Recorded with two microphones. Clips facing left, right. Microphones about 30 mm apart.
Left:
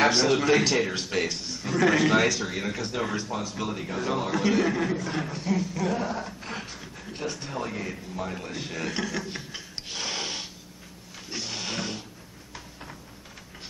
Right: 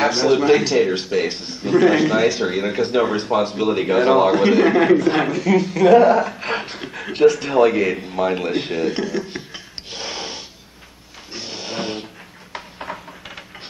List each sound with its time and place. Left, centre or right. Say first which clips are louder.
0.0 s a man's voice: right 5 dB; centre
1.2 s a man's voice: right 7 dB; right
3.2 s a man's voice: right 12 dB; right
3.7 s a man's voice: right 16 dB; right
4.7 s a man's voice: right 14 dB; right
6.5 s a man's voice: right 12 dB; right
8.8 s a sound: right 8 dB; centre
11.3 s music: right 3 dB; centre
11.8 s music: right 8 dB; right
12.5 s a sound: right 12 dB; right